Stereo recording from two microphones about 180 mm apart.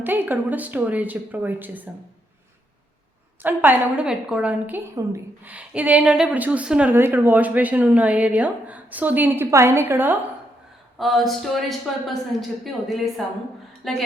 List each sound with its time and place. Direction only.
0.0 s a woman's voice: 10° right (ahead or behind)
3.4 s a woman's voice: 10° right (ahead or behind)
10.9 s speech: centre (ahead or behind)